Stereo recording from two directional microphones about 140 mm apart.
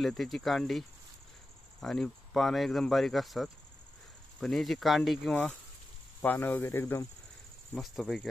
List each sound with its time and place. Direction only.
0.0 s speech: centre (ahead or behind)
5.3 s speech: 10° left (ahead or behind)
7.7 s speech: centre (ahead or behind)